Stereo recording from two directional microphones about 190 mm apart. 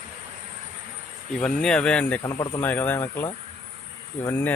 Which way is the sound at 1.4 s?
5° left (ahead or behind).